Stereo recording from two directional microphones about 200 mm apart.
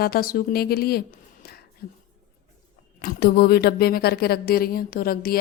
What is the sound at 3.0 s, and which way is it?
A woman's voice, 50° left (ahead or behind).